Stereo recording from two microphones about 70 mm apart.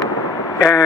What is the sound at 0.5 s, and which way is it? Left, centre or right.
Speech, left.